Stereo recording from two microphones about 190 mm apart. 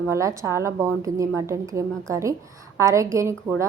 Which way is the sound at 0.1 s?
15° right (ahead or behind).